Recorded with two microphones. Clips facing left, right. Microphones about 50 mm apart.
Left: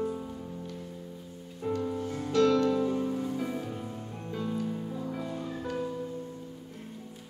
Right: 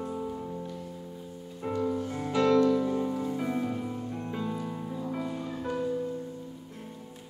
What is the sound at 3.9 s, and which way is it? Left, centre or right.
Music, centre.